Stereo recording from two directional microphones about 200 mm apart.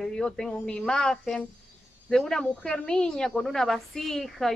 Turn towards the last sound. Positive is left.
turn(degrees=0)  # may be behind; listen again after turning